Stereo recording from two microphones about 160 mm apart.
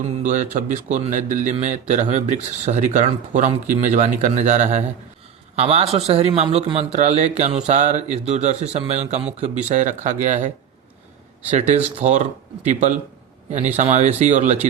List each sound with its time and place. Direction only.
0.0 s a man's voice: 50° right (ahead or behind)
11.5 s speech: 45° right (ahead or behind)